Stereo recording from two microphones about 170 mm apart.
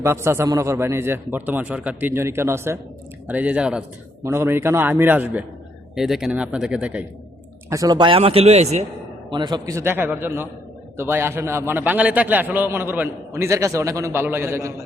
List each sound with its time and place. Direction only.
0.0 s a man's voice: 15° right (ahead or behind)
7.7 s speech: 20° right (ahead or behind); by 8.8 s 40° right (ahead or behind)
9.3 s a man's voice: 25° right (ahead or behind)